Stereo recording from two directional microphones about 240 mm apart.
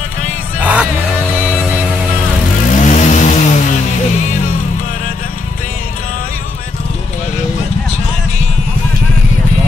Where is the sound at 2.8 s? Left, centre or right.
Left.